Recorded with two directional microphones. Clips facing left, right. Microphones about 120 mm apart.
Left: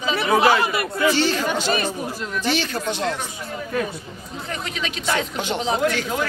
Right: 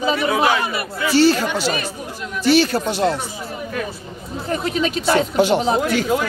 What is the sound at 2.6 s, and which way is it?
Speech, 40° right (ahead or behind).